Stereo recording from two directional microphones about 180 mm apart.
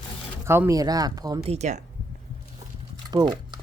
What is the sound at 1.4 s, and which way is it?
Speech, 40° right (ahead or behind).